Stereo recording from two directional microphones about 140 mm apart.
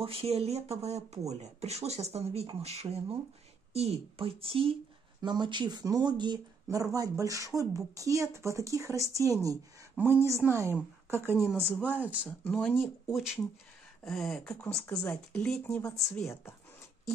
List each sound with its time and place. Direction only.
0.0 s speech: 45° right (ahead or behind); by 12.3 s 10° right (ahead or behind)
12.3 s speech: 10° left (ahead or behind)
13.1 s speech: 5° right (ahead or behind); by 16.5 s 15° left (ahead or behind)